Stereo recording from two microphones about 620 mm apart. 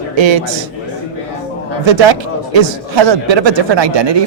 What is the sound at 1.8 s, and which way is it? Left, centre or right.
Speech, right.